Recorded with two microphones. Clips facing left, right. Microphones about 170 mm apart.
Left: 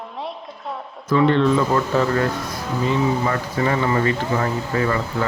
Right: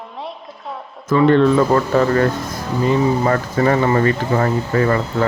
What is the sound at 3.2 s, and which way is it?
Speech, 45° right (ahead or behind).